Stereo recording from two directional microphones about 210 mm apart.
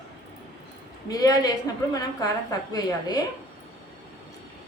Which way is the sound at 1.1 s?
15° left (ahead or behind).